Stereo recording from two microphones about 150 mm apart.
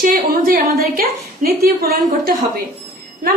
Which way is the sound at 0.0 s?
70° right (ahead or behind).